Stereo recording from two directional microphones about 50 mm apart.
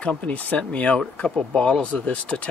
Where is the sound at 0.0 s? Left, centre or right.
Left.